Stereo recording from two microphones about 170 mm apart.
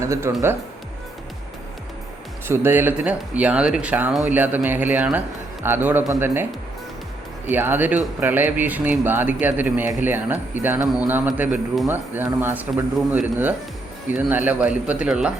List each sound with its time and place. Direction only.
0.0 s speech: 15° right (ahead or behind)
2.5 s speech: 15° right (ahead or behind)